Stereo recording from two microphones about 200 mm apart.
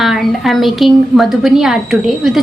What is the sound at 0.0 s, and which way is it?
A woman's voice, centre (ahead or behind).